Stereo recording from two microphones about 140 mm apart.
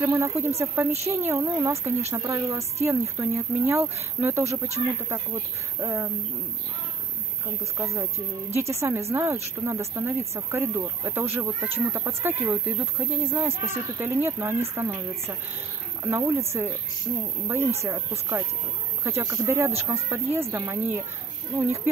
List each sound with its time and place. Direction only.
0.0 s speech: 20° right (ahead or behind)
5.8 s speech: 20° right (ahead or behind)
7.7 s speech: 20° right (ahead or behind)